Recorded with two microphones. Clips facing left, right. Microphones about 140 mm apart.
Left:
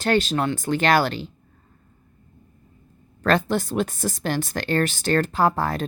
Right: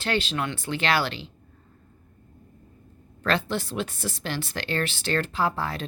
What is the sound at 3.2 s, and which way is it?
A woman's voice, 45° left (ahead or behind).